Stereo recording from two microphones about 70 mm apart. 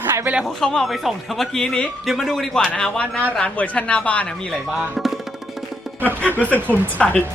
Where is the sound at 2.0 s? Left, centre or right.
Centre.